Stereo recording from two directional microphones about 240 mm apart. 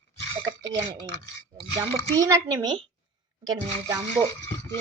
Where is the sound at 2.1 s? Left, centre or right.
Centre.